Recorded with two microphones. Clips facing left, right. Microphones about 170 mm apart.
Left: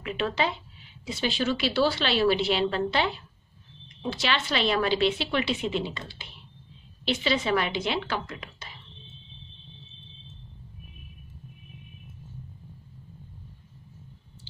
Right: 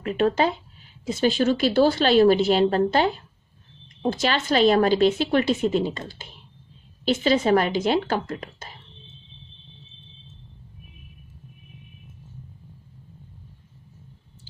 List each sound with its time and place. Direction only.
0.0 s speech: 45° right (ahead or behind)